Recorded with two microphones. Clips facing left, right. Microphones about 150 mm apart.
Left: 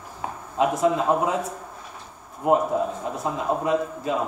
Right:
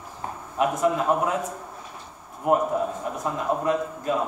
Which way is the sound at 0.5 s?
20° left (ahead or behind).